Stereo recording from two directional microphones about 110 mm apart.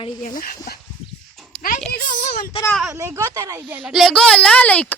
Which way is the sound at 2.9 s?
25° right (ahead or behind).